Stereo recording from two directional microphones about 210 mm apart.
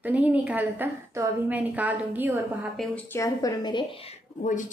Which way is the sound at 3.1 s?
15° left (ahead or behind).